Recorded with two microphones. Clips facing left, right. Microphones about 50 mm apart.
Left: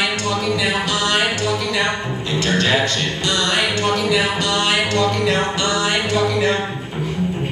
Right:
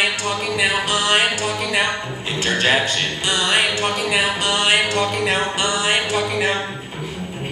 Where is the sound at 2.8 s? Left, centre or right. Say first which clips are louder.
Left 1 dB; centre.